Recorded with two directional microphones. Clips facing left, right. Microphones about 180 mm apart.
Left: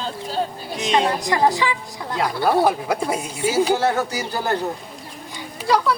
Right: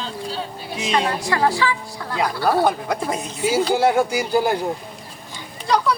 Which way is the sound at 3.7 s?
10° right (ahead or behind).